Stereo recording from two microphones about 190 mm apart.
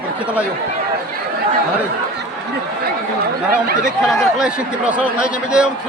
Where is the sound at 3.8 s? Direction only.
Centre (ahead or behind).